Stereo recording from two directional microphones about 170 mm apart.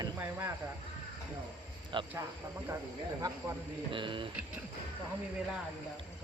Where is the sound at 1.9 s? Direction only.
25° right (ahead or behind).